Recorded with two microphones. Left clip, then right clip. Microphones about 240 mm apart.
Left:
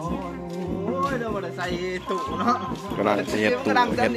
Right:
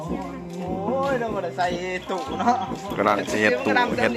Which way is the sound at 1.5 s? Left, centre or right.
Centre.